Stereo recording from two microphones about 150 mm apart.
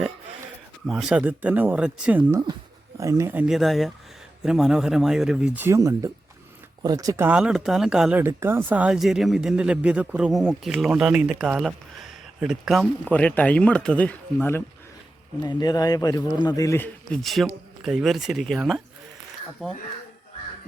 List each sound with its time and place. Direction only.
0.9 s speech: 5° right (ahead or behind)
3.0 s speech: 20° right (ahead or behind)
5.6 s speech: 20° right (ahead or behind)
7.3 s speech: 5° right (ahead or behind)
8.2 s speech: 15° right (ahead or behind); by 14.6 s 10° left (ahead or behind)
15.4 s a man's voice: 25° left (ahead or behind)
17.2 s speech: centre (ahead or behind)